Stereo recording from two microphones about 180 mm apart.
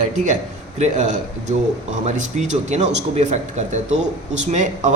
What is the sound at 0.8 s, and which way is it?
A man's voice, 40° right (ahead or behind).